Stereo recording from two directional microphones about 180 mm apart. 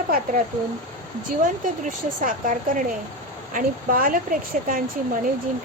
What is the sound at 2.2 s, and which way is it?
A woman's voice, 50° right (ahead or behind).